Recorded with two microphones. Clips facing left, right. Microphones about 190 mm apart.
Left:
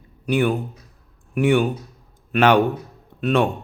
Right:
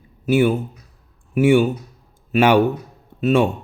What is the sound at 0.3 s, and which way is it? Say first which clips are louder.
A man's voice: right 3 dB; 5° right (ahead or behind).